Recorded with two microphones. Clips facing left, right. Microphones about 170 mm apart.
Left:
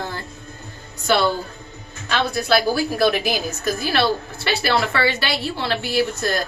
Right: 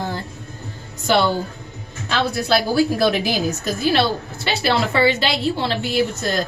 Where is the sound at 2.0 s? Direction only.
25° right (ahead or behind).